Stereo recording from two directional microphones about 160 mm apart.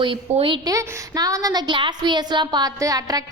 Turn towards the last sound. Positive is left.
turn(degrees=-20)  # may be behind; listen again after turning